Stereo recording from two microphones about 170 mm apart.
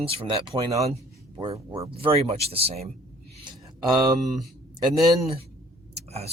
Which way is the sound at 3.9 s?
25° right (ahead or behind).